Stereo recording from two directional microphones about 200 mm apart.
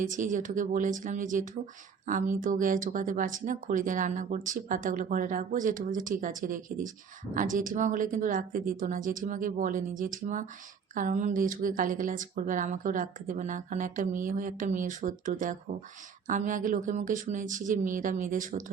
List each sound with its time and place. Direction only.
0.0 s a woman's voice: 40° right (ahead or behind)